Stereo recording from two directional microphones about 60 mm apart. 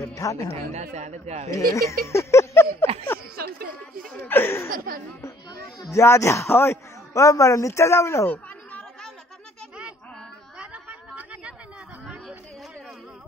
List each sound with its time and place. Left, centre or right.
0.1 s speech: left
1.5 s speech: left
4.3 s speech: left
5.9 s a man's voice: left
7.2 s a man's voice: left
10.6 s a sound: right